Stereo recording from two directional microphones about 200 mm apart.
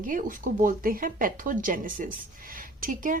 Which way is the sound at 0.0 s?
40° right (ahead or behind).